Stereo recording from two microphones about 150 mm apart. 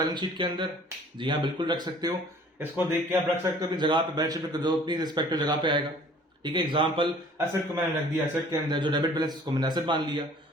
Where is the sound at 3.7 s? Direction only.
30° right (ahead or behind).